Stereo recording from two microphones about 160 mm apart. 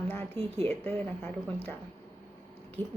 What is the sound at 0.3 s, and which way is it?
Speech, 40° right (ahead or behind).